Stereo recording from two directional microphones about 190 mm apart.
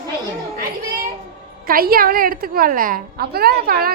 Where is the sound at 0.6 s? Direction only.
50° right (ahead or behind).